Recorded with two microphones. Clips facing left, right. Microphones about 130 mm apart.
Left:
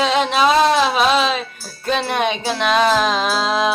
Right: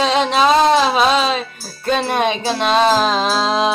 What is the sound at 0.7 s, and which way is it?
Speech, 25° right (ahead or behind).